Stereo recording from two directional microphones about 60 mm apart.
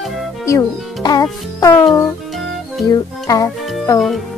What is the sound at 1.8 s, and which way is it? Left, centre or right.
Music, centre.